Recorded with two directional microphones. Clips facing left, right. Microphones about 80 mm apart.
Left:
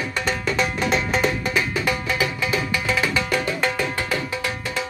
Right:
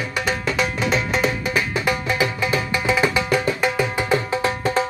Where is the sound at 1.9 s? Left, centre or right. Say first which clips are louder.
Right 2 dB; right.